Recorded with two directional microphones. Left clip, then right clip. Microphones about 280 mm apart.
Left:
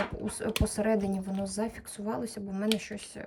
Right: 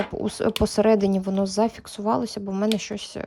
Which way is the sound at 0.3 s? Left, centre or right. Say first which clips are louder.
Right 9 dB; centre.